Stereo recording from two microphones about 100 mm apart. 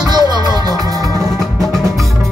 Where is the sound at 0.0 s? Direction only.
45° right (ahead or behind).